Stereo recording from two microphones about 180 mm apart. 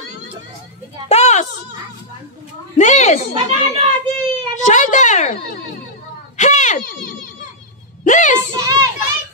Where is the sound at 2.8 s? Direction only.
40° left (ahead or behind).